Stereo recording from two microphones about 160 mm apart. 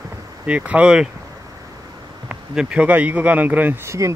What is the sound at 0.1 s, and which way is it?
Speech, 10° right (ahead or behind).